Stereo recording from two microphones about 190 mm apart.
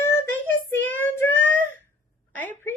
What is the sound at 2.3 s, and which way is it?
Speech, 10° left (ahead or behind).